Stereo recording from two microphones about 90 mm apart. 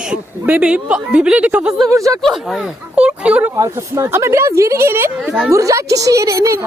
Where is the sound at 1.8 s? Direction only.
40° right (ahead or behind).